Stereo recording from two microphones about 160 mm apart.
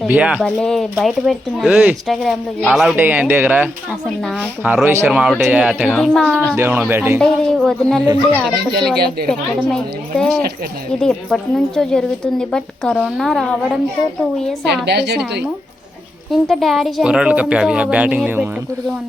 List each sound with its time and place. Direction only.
0.1 s a woman's voice: 10° right (ahead or behind)
6.6 s speech: 10° right (ahead or behind)
7.2 s a woman's voice: centre (ahead or behind)
9.0 s speech: 80° right
9.7 s a woman's voice: 5° left (ahead or behind)
14.8 s a woman's voice: 90° right
16.3 s a woman's voice: centre (ahead or behind)